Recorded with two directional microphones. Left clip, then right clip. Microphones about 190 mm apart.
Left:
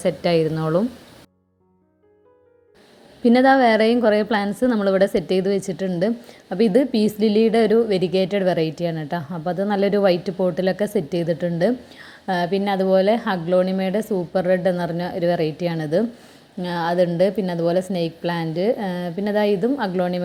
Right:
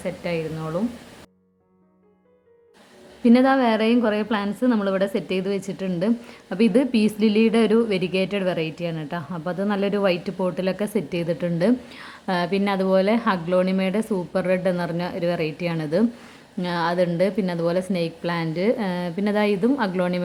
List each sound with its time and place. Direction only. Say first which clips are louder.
0.0 s speech: left 8 dB; 35° left (ahead or behind)
3.2 s a woman's voice: left 3 dB; 15° left (ahead or behind)